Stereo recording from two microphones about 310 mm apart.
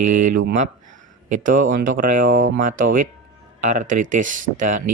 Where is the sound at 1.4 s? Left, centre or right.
Right.